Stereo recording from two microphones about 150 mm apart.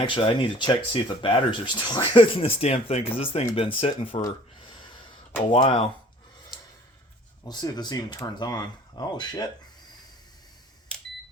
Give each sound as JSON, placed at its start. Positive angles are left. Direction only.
{"t": 0.0, "sound": "speech", "side_deg": 35}
{"t": 5.5, "sound": "speech", "side_deg": 35}
{"t": 7.4, "sound": "speech", "side_deg": 25}